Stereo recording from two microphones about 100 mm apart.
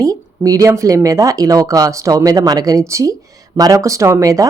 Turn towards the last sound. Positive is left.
turn(degrees=-35)  # may be behind; listen again after turning